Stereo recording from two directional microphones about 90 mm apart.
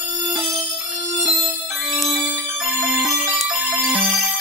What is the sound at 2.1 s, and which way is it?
Music, 15° right (ahead or behind).